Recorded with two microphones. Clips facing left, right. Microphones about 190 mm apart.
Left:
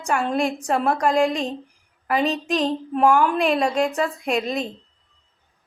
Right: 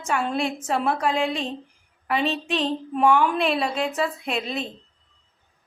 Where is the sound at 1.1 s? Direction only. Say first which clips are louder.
Left 4 dB; 40° left (ahead or behind).